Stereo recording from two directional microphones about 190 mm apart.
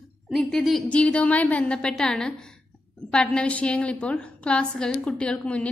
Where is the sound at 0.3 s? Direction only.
Centre (ahead or behind).